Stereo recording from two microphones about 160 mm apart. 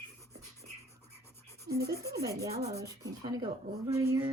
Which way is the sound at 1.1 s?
15° left (ahead or behind).